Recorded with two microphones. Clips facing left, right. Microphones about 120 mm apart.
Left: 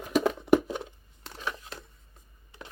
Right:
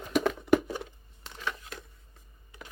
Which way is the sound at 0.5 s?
20° left (ahead or behind).